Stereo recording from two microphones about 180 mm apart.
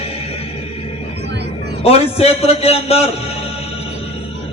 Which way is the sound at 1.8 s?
35° left (ahead or behind).